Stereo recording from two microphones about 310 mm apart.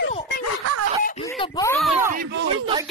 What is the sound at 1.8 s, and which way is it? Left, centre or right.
Speech, centre.